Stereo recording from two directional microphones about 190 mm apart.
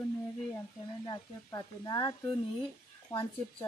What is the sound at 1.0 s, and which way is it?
Speech, 20° left (ahead or behind).